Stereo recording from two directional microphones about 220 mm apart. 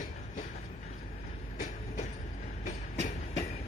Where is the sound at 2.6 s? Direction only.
30° left (ahead or behind).